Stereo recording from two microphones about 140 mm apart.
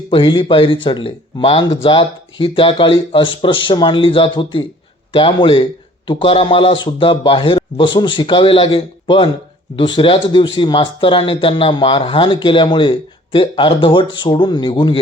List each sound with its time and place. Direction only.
0.1 s speech: 35° left (ahead or behind)